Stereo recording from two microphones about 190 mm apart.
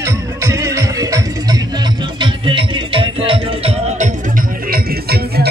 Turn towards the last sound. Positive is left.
turn(degrees=-55)  # may be behind; listen again after turning